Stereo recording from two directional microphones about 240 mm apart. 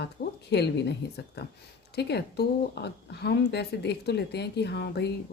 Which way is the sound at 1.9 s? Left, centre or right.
Left.